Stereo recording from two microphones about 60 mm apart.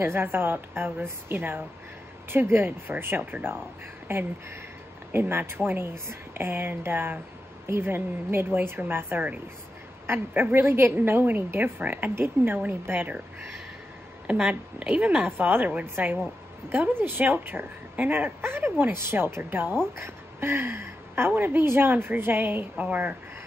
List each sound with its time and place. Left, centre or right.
0.0 s a woman's voice: right
14.2 s a woman's voice: right
20.0 s a sound: right
21.4 s a woman's voice: right